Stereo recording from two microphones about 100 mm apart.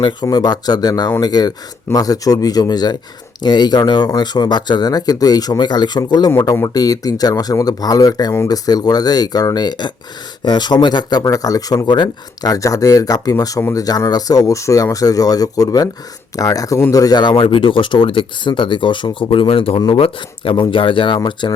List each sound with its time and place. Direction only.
0.0 s speech: 45° left (ahead or behind)